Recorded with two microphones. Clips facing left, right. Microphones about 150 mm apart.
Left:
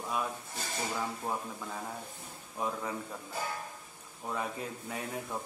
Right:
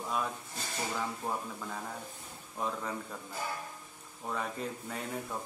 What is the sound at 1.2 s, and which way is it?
Speech, 10° right (ahead or behind).